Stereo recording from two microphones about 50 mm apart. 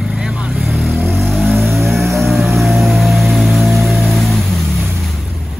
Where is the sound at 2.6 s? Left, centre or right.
Centre.